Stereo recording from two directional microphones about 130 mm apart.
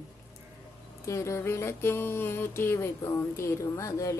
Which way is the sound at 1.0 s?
20° left (ahead or behind).